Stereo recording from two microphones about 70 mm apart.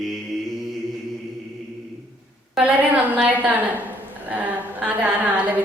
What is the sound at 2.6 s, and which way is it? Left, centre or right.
A woman's voice, centre.